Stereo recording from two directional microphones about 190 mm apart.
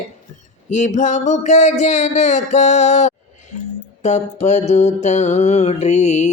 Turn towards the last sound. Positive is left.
turn(degrees=40)  # may be behind; listen again after turning